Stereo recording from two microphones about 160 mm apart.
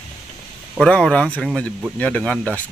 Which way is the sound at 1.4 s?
5° right (ahead or behind).